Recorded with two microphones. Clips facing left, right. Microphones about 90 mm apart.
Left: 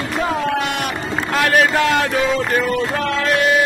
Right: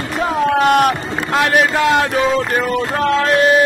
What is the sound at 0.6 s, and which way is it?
Speech, 50° right (ahead or behind).